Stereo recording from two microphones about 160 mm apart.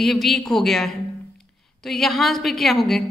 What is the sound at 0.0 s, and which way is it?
A woman's voice, centre (ahead or behind).